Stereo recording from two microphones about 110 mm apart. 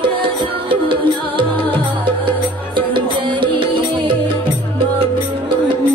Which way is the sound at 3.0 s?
50° right (ahead or behind).